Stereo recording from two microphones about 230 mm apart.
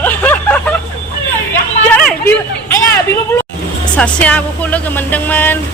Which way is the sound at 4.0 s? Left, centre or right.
Centre.